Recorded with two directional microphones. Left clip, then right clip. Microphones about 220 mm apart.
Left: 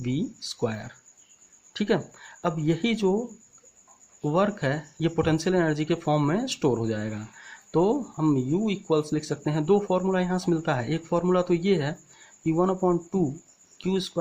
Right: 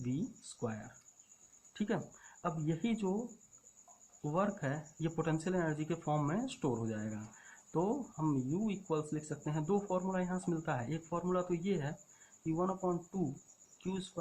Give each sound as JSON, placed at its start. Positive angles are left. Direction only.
{"t": 0.0, "sound": "speech", "side_deg": 45}
{"t": 4.2, "sound": "speech", "side_deg": 45}